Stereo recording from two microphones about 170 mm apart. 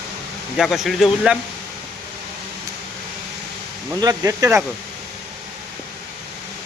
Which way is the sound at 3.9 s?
20° right (ahead or behind).